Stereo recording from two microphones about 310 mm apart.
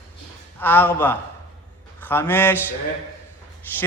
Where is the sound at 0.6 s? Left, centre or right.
Centre.